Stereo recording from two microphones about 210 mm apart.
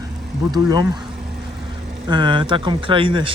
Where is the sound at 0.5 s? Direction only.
20° right (ahead or behind).